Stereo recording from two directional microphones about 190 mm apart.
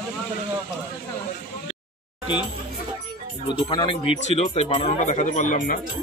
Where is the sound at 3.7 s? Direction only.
25° left (ahead or behind); by 5.8 s 45° left (ahead or behind).